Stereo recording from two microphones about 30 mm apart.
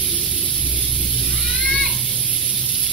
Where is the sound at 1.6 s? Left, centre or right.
Centre.